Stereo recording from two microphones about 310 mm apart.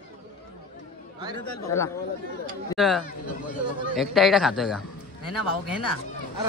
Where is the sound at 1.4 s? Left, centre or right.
Left.